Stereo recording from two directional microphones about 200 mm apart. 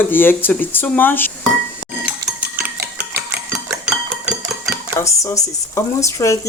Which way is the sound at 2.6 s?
45° right (ahead or behind).